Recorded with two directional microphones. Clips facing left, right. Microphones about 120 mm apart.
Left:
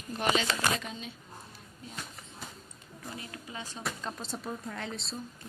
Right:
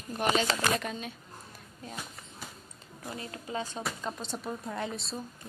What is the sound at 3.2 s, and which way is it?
Speech, 35° right (ahead or behind).